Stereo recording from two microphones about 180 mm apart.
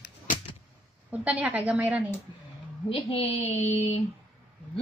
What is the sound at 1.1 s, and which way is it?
Speech, 10° right (ahead or behind).